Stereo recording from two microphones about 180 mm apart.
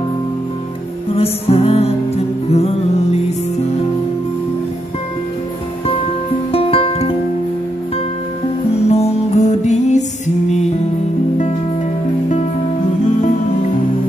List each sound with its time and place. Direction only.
1.1 s music: 35° left (ahead or behind)
6.5 s music: 30° left (ahead or behind)
8.8 s music: 35° left (ahead or behind)